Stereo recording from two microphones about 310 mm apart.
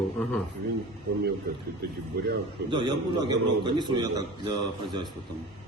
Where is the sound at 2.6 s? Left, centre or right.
Centre.